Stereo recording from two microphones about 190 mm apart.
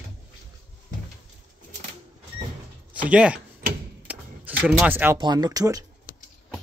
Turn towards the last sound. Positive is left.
turn(degrees=-20)  # may be behind; listen again after turning